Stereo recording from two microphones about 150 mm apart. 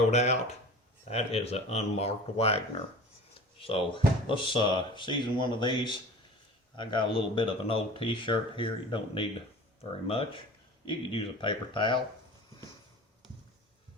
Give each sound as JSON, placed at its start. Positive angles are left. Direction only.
{"t": 0.1, "sound": "speech", "side_deg": 45}